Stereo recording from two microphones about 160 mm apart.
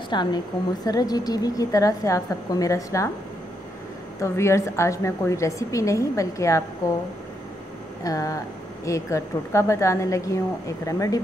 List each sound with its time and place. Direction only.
0.1 s a woman's voice: 30° left (ahead or behind)
4.2 s a woman's voice: 20° left (ahead or behind)
8.0 s a woman's voice: 20° left (ahead or behind)